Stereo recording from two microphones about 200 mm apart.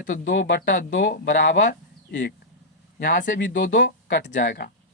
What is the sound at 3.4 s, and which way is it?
Speech, 65° left (ahead or behind).